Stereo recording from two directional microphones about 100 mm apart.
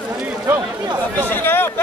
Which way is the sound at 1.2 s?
20° left (ahead or behind).